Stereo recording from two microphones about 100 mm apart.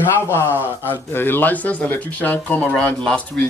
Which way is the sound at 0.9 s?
20° left (ahead or behind).